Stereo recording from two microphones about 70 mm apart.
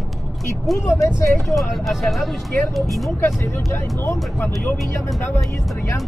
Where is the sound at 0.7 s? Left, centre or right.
Centre.